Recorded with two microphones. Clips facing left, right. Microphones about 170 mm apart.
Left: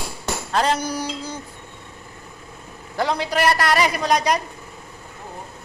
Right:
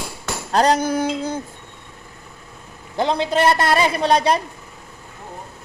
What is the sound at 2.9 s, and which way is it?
A woman's voice, 25° right (ahead or behind).